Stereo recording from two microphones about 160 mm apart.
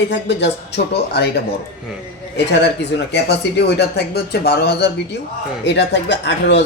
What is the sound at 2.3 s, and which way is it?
Speech, 90° left.